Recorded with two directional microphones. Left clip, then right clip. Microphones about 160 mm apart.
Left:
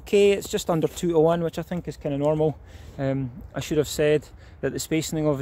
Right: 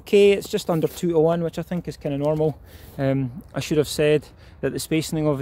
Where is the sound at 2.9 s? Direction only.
50° right (ahead or behind).